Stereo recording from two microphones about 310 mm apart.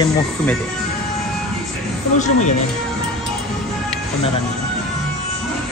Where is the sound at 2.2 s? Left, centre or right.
Left.